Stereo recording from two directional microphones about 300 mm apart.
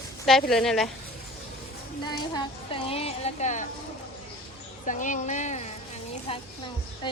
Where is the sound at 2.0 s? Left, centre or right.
Centre.